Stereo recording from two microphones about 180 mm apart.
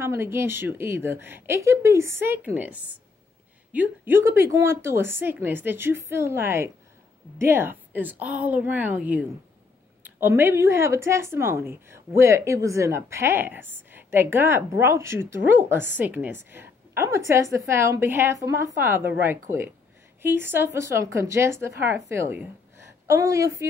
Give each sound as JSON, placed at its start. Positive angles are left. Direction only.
{"t": 0.0, "sound": "a woman's voice", "side_deg": -15}